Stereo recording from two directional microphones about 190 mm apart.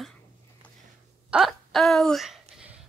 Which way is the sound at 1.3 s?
Centre (ahead or behind).